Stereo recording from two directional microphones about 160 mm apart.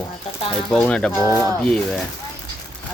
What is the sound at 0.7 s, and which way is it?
Speech, 5° left (ahead or behind).